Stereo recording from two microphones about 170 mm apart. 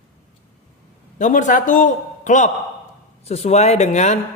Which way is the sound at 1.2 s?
45° left (ahead or behind).